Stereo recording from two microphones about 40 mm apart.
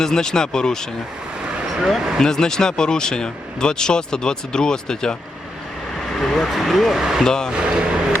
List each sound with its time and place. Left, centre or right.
0.0 s speech: centre
2.1 s speech: centre
6.1 s speech: centre
6.5 s speech: centre
7.0 s speech: centre
7.3 s speech: centre
7.5 s a sound: right